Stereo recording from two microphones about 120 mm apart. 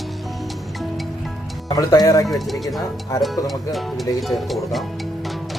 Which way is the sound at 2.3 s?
Centre (ahead or behind).